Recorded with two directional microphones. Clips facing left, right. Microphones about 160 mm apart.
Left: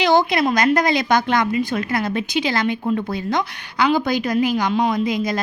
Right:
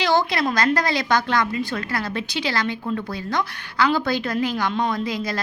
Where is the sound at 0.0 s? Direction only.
20° left (ahead or behind).